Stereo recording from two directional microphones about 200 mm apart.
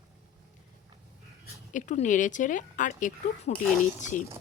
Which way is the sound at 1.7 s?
40° left (ahead or behind).